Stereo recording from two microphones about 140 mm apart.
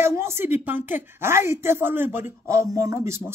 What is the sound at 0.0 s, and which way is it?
A woman's voice, 20° right (ahead or behind).